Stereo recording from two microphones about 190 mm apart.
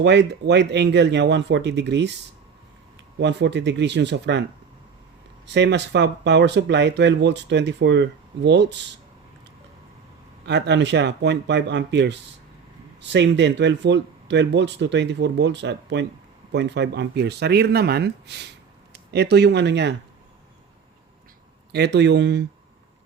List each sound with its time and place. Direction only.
0.0 s speech: 65° right (ahead or behind)
3.2 s speech: 65° right (ahead or behind)
5.5 s speech: 65° right (ahead or behind)
10.4 s speech: 65° right (ahead or behind)
21.7 s speech: 65° right (ahead or behind)